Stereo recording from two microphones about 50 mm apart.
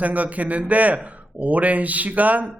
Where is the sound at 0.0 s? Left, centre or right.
Right.